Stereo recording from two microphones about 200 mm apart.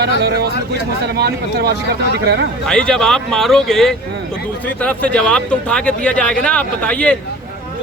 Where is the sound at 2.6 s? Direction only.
5° left (ahead or behind).